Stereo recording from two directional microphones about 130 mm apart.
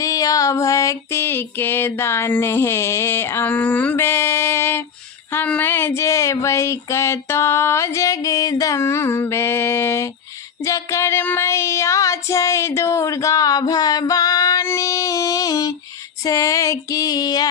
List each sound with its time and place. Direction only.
0.0 s female singing: 25° left (ahead or behind)
10.6 s child singing: 25° left (ahead or behind)
16.2 s female singing: 25° left (ahead or behind)